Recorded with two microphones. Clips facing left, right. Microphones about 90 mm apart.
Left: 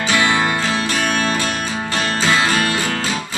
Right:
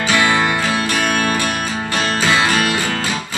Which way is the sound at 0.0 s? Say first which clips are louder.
Right 1 dB; 25° left (ahead or behind).